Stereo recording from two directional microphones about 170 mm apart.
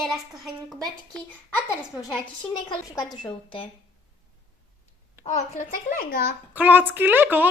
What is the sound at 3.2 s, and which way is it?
Speech, 30° left (ahead or behind).